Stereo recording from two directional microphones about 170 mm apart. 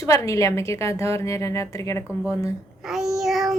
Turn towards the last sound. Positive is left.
turn(degrees=0)  # may be behind; listen again after turning